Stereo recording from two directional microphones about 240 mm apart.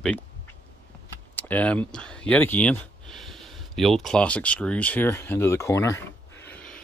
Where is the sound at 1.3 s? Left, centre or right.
Centre.